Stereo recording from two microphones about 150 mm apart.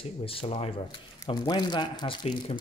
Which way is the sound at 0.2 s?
40° left (ahead or behind).